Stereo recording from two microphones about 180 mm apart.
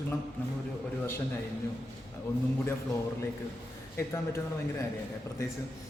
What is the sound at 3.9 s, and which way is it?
Speech, 15° left (ahead or behind).